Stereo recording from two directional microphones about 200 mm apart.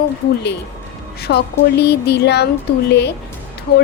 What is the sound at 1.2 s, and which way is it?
Speech, 55° left (ahead or behind).